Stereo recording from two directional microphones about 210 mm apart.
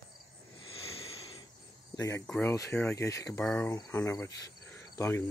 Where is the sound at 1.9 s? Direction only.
15° left (ahead or behind).